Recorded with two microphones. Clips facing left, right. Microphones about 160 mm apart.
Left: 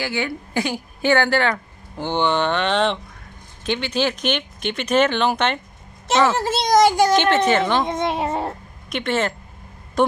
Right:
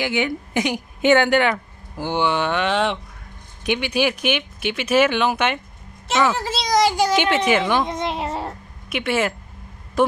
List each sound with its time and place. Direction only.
0.0 s a woman's voice: 20° right (ahead or behind)
6.3 s a child's voice: 50° left (ahead or behind)
7.2 s speech: 10° right (ahead or behind)
7.9 s a child's voice: 55° left (ahead or behind)
8.8 s a woman's voice: 5° right (ahead or behind)